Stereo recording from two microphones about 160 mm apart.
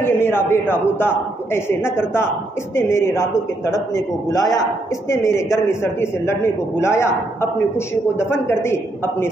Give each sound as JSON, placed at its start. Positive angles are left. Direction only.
{"t": 0.0, "sound": "a man's voice", "side_deg": 15}